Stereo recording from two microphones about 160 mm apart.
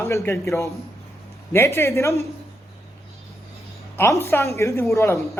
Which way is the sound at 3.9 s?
15° left (ahead or behind).